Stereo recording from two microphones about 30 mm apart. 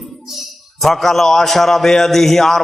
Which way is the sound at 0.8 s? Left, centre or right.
Centre.